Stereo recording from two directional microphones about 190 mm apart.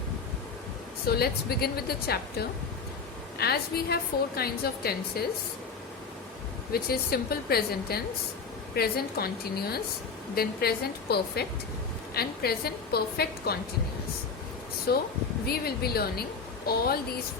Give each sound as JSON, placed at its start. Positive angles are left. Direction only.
{"t": 1.0, "sound": "a woman's voice", "side_deg": 55}
{"t": 3.3, "sound": "a woman's voice", "side_deg": 55}
{"t": 6.7, "sound": "a woman's voice", "side_deg": 55}
{"t": 14.9, "sound": "a woman's voice", "side_deg": 55}